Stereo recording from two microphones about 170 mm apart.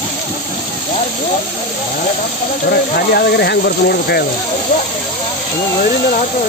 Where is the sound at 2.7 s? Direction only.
70° left (ahead or behind).